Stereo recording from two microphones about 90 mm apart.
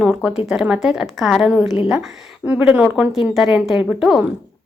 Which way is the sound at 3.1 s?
Centre (ahead or behind).